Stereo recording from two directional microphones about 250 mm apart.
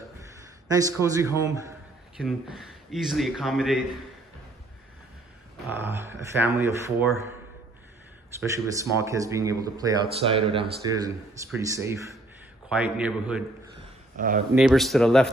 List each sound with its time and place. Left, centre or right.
0.7 s speech: centre
2.1 s speech: centre
5.7 s speech: centre
8.4 s speech: centre
14.1 s speech: right
14.5 s speech: centre